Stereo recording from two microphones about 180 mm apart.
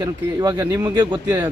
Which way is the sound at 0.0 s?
20° right (ahead or behind).